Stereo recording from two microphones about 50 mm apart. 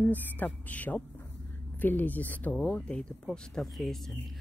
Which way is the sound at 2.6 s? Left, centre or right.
Left.